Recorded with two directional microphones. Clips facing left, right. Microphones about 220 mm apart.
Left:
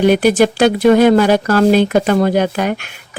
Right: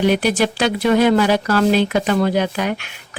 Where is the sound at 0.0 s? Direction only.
50° left (ahead or behind).